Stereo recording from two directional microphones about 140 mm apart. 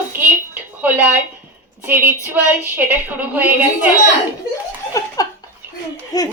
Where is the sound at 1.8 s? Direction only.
15° right (ahead or behind).